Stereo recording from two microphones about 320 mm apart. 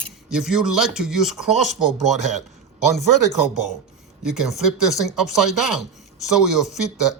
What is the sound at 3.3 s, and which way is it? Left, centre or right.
Speech, centre.